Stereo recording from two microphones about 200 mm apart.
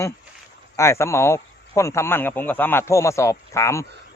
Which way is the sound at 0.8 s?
15° left (ahead or behind).